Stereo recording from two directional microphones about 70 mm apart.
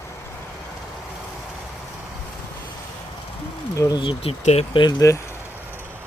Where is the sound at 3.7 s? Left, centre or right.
Left.